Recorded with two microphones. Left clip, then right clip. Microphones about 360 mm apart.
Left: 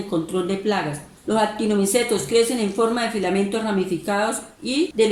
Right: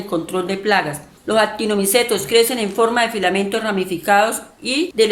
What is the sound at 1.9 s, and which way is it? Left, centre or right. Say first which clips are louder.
Speech: right 5 dB; right.